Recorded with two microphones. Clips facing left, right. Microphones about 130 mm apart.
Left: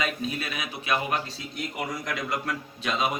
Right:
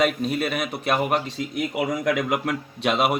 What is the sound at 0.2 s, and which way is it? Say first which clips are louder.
Speech: right 7 dB; 60° right (ahead or behind).